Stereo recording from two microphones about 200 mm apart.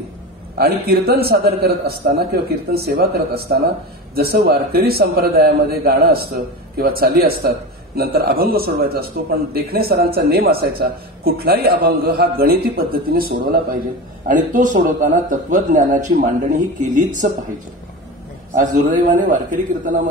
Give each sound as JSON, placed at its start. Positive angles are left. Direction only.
{"t": 0.6, "sound": "a man's voice", "side_deg": -50}
{"t": 4.1, "sound": "a man's voice", "side_deg": -50}
{"t": 18.5, "sound": "a man's voice", "side_deg": -40}